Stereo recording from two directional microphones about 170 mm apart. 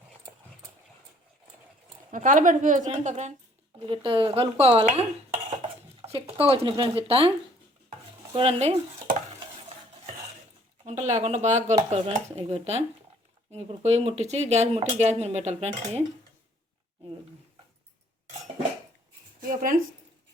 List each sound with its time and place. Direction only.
2.0 s speech: 50° right (ahead or behind)
3.8 s speech: 30° right (ahead or behind)
8.3 s speech: 35° right (ahead or behind)
10.8 s speech: 45° right (ahead or behind)
19.4 s speech: 55° right (ahead or behind)